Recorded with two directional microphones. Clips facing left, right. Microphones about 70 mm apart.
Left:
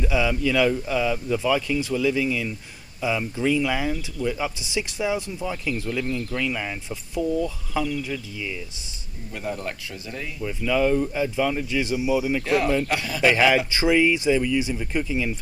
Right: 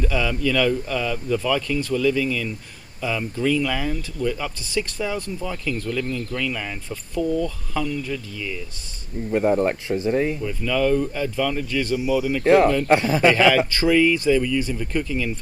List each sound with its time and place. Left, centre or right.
0.0 s speech: centre
9.3 s speech: right
10.4 s speech: centre
12.4 s speech: right
13.3 s speech: centre